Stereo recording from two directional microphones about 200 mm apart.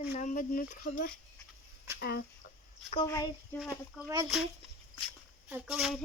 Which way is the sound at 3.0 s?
15° left (ahead or behind).